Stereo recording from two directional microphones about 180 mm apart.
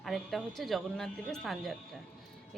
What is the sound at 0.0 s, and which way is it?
A woman's voice, centre (ahead or behind).